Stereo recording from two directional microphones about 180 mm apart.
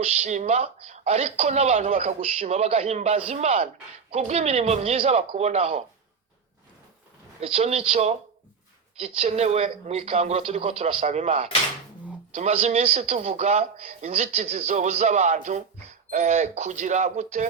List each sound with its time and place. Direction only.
0.0 s a man's voice: 40° right (ahead or behind)
7.4 s a man's voice: 35° right (ahead or behind)